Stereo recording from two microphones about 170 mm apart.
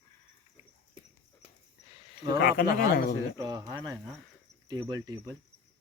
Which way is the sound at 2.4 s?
60° left (ahead or behind).